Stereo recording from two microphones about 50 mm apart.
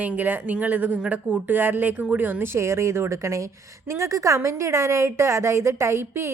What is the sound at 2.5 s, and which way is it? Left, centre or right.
A woman's voice, right.